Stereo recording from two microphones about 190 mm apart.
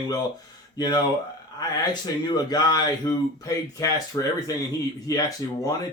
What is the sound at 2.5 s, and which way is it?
Speech, 20° left (ahead or behind).